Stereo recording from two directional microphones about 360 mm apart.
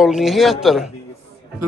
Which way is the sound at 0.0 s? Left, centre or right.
Centre.